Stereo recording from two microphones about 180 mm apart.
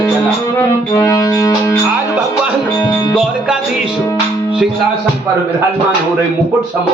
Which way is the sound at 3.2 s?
5° right (ahead or behind).